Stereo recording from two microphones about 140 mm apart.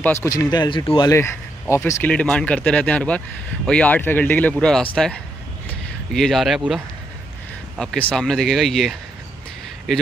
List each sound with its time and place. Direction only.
0.0 s speech: 20° left (ahead or behind); by 1.1 s 35° left (ahead or behind)
1.1 s speech: 20° left (ahead or behind)
2.1 s speech: 5° left (ahead or behind)
5.7 s a sound: 5° left (ahead or behind)
7.7 s speech: 5° left (ahead or behind)